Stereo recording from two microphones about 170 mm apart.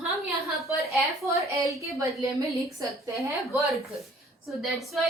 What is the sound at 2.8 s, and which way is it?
Speech, 20° right (ahead or behind).